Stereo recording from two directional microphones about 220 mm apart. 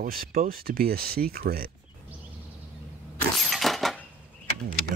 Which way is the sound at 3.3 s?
Centre (ahead or behind).